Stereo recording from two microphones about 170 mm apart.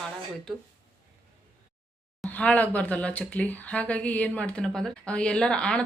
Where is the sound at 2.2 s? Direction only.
10° left (ahead or behind).